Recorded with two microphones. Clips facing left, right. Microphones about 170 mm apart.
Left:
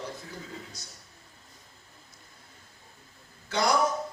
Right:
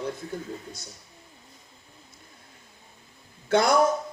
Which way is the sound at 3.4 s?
55° right (ahead or behind).